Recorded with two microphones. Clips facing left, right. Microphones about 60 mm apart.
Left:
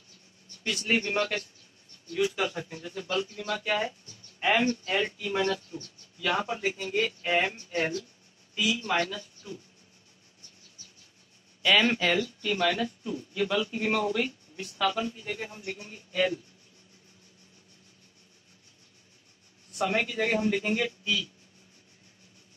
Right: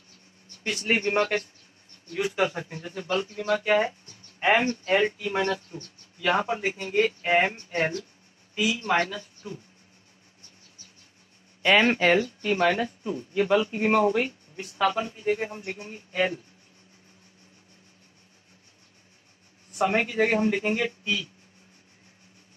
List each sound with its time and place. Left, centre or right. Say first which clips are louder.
0.7 s speech: right 3 dB; right
8.5 s speech: right 3 dB; right
11.6 s speech: right 4 dB; right
19.8 s speech: right 4 dB; right